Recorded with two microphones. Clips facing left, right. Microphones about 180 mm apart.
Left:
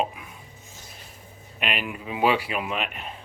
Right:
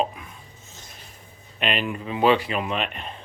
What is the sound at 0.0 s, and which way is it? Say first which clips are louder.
Chopping: right 2 dB; 10° left (ahead or behind).